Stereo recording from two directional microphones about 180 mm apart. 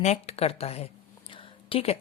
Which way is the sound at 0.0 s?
40° left (ahead or behind).